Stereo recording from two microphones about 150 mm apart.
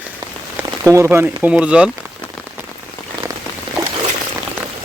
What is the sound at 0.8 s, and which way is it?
Speech, 20° right (ahead or behind).